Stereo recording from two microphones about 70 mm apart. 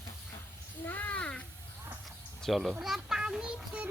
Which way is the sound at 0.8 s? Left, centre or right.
Left.